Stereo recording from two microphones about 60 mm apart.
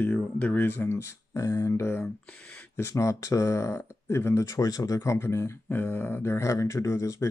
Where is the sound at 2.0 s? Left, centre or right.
Centre.